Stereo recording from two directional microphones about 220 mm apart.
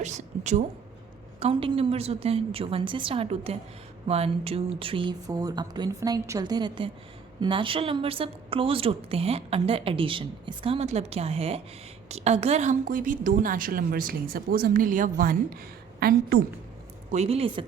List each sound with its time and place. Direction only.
0.0 s a woman's voice: 30° right (ahead or behind)
17.1 s a woman's voice: 30° right (ahead or behind)